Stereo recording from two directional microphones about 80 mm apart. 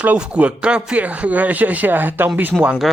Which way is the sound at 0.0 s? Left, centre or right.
Centre.